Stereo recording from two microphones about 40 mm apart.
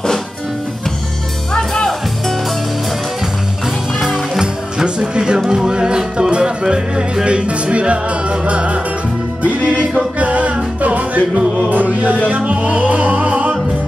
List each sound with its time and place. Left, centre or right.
1.5 s music: centre
4.0 s music: centre; by 8.8 s right
10.1 s music: right